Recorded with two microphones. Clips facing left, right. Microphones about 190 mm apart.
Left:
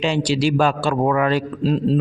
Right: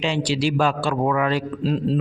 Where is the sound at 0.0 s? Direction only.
40° left (ahead or behind).